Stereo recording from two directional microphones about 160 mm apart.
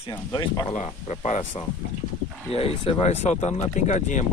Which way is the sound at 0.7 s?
40° left (ahead or behind).